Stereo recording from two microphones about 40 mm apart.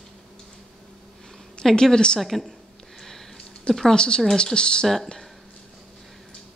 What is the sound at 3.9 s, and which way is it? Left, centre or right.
Speech, left.